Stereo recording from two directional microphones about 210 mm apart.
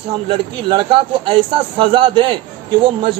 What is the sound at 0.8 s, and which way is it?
A man's voice, 25° right (ahead or behind).